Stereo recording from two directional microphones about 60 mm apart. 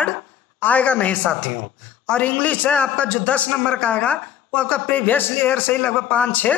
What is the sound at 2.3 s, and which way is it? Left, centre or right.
A man's voice, left.